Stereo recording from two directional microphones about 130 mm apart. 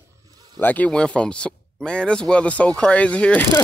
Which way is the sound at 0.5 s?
15° left (ahead or behind).